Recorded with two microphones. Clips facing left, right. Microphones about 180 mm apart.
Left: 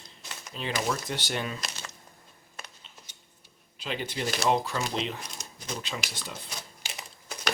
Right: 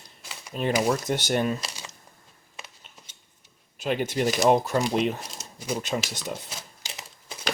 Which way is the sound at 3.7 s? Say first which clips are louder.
Right 8 dB; 50° right (ahead or behind).